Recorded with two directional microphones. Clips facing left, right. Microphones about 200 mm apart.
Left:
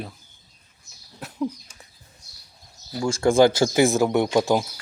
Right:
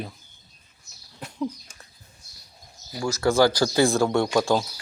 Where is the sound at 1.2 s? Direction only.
5° left (ahead or behind).